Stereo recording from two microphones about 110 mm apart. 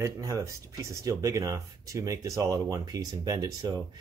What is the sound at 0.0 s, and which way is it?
Speech, 30° right (ahead or behind).